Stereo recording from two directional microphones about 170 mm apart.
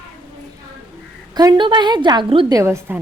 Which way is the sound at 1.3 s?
20° right (ahead or behind).